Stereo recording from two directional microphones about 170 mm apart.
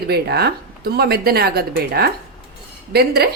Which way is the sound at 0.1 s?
70° right (ahead or behind).